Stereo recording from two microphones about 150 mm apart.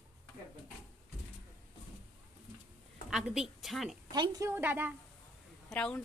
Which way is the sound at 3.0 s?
5° right (ahead or behind).